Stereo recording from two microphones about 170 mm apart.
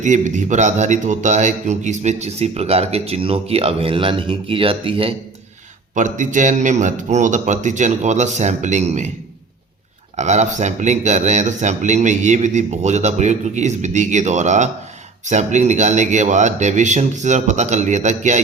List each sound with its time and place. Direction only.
0.0 s a man's voice: 45° right (ahead or behind)
5.9 s speech: 45° right (ahead or behind)
10.2 s speech: 45° right (ahead or behind)